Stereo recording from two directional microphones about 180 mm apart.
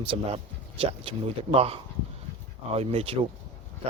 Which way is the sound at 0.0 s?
30° right (ahead or behind).